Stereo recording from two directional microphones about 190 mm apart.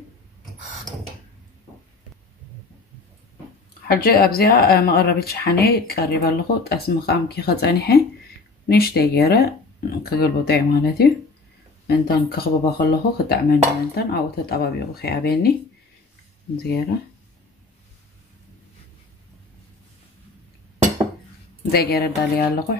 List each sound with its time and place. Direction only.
3.8 s speech: 50° left (ahead or behind)
16.5 s speech: 60° left (ahead or behind)
21.6 s speech: 55° left (ahead or behind)